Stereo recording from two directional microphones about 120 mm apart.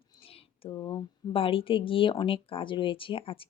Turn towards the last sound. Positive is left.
turn(degrees=50)  # may be behind; listen again after turning